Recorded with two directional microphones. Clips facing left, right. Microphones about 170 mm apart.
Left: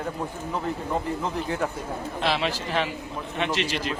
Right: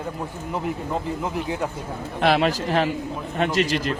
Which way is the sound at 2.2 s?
55° right (ahead or behind).